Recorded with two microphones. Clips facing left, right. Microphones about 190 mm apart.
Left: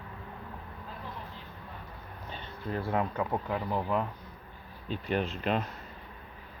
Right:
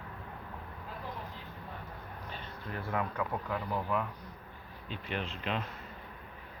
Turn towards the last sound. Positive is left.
turn(degrees=45)  # may be behind; listen again after turning